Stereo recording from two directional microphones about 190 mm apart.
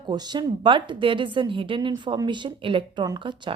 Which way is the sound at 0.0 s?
20° right (ahead or behind).